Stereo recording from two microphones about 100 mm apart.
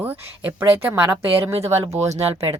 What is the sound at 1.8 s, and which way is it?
Speech, 90° right.